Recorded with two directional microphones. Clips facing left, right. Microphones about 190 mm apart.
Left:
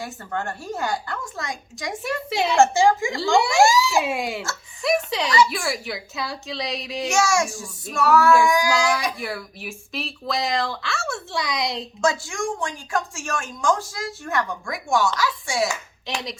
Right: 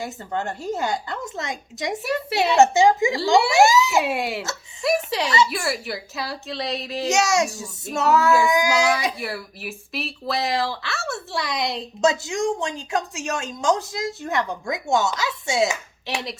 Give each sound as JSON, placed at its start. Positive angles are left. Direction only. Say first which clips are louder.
{"t": 0.0, "sound": "a woman's voice", "louder": "right 2 dB", "side_deg": -20}
{"t": 3.3, "sound": "speech", "louder": "right 1 dB", "side_deg": -5}
{"t": 3.6, "sound": "a woman's voice", "louder": "right 1 dB", "side_deg": -20}
{"t": 4.0, "sound": "speech", "louder": "right 1 dB", "side_deg": 0}
{"t": 4.8, "sound": "a sound", "louder": "even", "side_deg": -5}
{"t": 5.5, "sound": "speech", "louder": "right 1 dB", "side_deg": 0}
{"t": 7.1, "sound": "a woman's voice", "louder": "right 1 dB", "side_deg": -20}
{"t": 9.1, "sound": "speech", "louder": "even", "side_deg": -5}
{"t": 12.0, "sound": "a woman's voice", "louder": "right 3 dB", "side_deg": -20}